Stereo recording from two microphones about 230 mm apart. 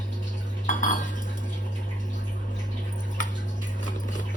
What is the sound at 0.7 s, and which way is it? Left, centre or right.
Cutlery, left.